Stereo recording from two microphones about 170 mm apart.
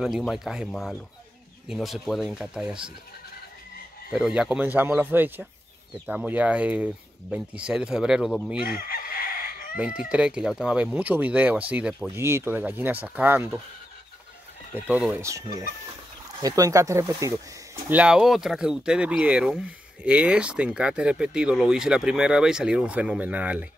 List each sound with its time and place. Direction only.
0.0 s speech: centre (ahead or behind)
4.1 s speech: 5° right (ahead or behind)
8.6 s chicken: 60° left (ahead or behind)
9.8 s speech: 5° right (ahead or behind)
14.9 s speech: 5° right (ahead or behind)
15.2 s speech: 20° right (ahead or behind)